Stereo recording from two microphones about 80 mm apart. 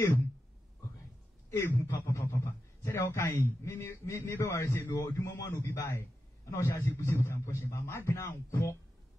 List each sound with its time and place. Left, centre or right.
1.8 s a man's voice: left
5.5 s a man's voice: left